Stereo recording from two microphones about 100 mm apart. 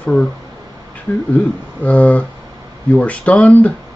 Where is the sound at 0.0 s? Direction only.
10° left (ahead or behind).